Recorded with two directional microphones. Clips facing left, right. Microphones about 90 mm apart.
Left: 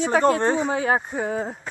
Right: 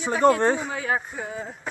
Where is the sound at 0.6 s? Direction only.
35° left (ahead or behind).